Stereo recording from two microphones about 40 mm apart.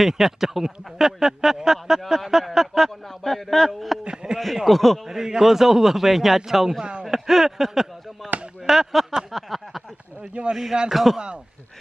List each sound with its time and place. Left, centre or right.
0.0 s speech: centre
3.1 s a sound: centre
4.0 s a sound: right
4.6 s a man's voice: centre
5.0 s speech: centre
6.8 s speech: right
7.1 s chop: centre
8.6 s speech: centre
9.3 s a sound: centre
10.2 s speech: right
10.5 s a man's voice: centre